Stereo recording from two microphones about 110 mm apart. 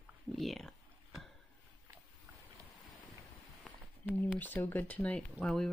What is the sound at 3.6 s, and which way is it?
Speech, 15° left (ahead or behind).